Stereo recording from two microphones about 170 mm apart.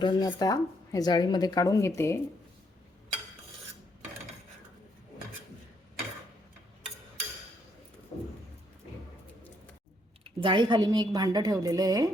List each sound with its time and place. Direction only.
0.0 s speech: 25° left (ahead or behind)
8.1 s vehicle: 40° left (ahead or behind)
10.2 s a woman's voice: 30° right (ahead or behind)